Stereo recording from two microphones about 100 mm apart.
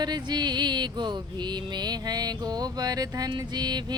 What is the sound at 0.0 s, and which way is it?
Music, 45° right (ahead or behind).